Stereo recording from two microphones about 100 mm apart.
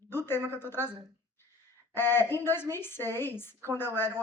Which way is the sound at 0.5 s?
20° left (ahead or behind).